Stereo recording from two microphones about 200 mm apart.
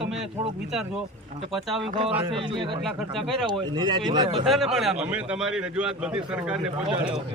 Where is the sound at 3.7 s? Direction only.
20° right (ahead or behind).